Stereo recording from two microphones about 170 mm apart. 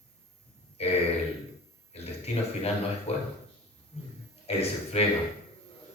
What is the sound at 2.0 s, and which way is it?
A man's voice, 40° left (ahead or behind).